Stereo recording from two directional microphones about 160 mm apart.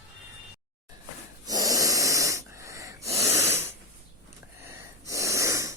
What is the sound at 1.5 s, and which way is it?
Wheeze, 20° right (ahead or behind).